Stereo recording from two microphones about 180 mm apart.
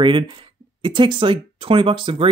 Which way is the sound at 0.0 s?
25° right (ahead or behind).